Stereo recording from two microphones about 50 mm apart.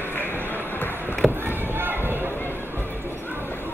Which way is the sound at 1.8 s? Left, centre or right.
Right.